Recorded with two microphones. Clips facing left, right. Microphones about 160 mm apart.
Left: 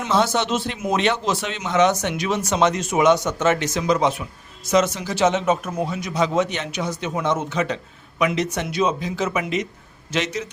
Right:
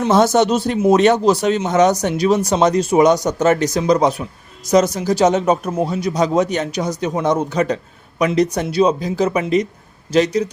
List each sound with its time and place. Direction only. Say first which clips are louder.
0.1 s speech: right 6 dB; 45° right (ahead or behind)